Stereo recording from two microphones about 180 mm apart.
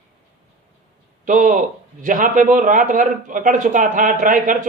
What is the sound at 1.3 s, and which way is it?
A man's voice, 45° right (ahead or behind).